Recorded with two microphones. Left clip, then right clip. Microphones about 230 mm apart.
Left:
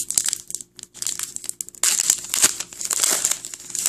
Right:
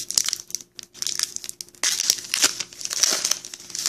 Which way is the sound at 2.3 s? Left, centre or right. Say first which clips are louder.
Even; centre.